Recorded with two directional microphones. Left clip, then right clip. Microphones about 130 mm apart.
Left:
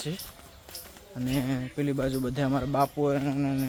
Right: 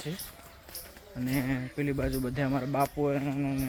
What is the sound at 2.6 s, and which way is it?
Speech, 10° left (ahead or behind).